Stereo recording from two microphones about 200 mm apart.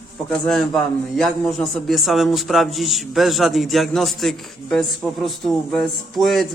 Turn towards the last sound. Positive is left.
turn(degrees=0)  # may be behind; listen again after turning